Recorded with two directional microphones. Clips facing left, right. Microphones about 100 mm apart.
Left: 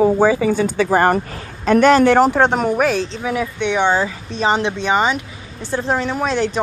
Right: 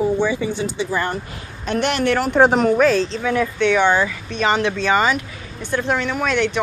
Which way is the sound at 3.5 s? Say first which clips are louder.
Even; 20° left (ahead or behind).